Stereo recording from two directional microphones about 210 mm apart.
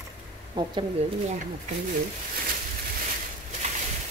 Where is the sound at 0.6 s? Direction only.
20° right (ahead or behind).